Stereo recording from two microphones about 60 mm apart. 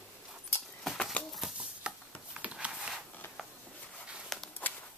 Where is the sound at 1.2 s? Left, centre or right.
Left.